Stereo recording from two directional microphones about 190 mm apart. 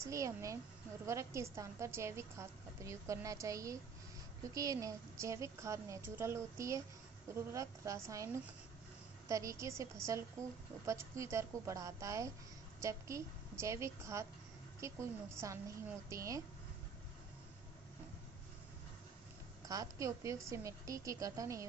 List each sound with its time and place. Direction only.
0.0 s a woman's voice: 15° right (ahead or behind)
19.6 s a woman's voice: 20° right (ahead or behind)